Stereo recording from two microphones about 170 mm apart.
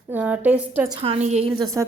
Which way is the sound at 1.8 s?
20° right (ahead or behind).